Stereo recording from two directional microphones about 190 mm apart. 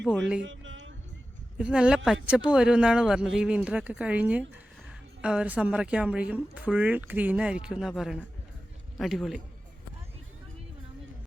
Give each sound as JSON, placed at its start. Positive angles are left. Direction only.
{"t": 0.0, "sound": "speech", "side_deg": 0}
{"t": 0.4, "sound": "music", "side_deg": -85}
{"t": 1.5, "sound": "a woman's voice", "side_deg": -5}